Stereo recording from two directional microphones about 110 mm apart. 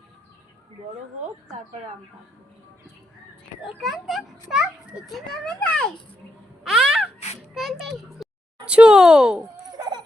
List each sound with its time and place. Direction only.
3.6 s a child's voice: centre (ahead or behind)
5.1 s a child's voice: 10° left (ahead or behind)
6.7 s gasp: 5° right (ahead or behind)
7.5 s a child's voice: centre (ahead or behind)
9.7 s a sound: 40° right (ahead or behind)